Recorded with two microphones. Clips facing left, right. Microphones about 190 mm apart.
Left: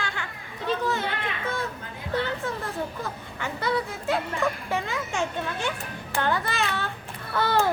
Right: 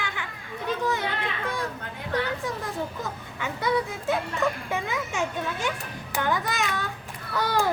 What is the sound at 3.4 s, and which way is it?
Speech, 15° right (ahead or behind).